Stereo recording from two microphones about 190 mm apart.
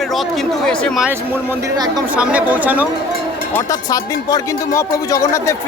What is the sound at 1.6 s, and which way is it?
Speech, 20° right (ahead or behind).